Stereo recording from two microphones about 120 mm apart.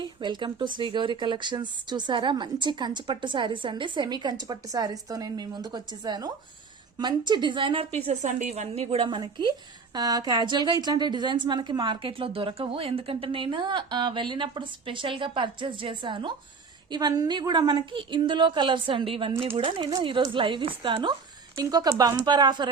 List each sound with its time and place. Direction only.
0.0 s a woman's voice: 40° right (ahead or behind); by 9.0 s 55° right (ahead or behind)
9.0 s a woman's voice: 40° right (ahead or behind)